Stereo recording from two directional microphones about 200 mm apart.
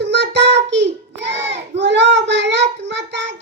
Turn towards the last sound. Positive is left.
turn(degrees=-65)  # may be behind; listen again after turning